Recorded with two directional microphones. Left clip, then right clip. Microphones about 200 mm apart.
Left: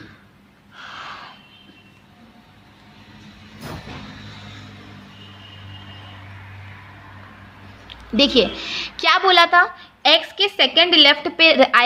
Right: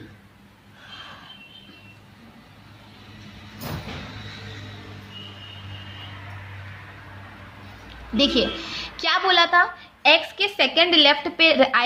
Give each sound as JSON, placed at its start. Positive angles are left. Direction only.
{"t": 0.9, "sound": "snort", "side_deg": 40}
{"t": 8.1, "sound": "a woman's voice", "side_deg": 35}